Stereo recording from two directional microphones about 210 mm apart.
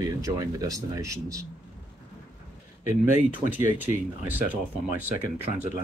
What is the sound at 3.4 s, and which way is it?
Speech, 10° right (ahead or behind).